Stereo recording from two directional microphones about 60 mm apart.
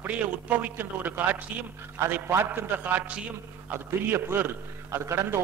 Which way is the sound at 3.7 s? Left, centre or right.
Right.